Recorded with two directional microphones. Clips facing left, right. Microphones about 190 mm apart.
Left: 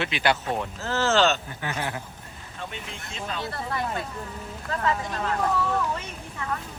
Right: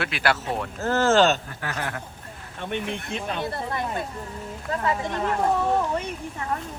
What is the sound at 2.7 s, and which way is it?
Speech, 60° right (ahead or behind).